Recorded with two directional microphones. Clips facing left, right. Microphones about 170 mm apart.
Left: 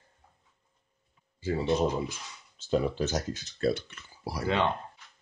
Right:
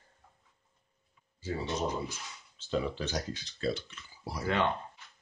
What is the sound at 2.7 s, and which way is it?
Speech, 45° left (ahead or behind).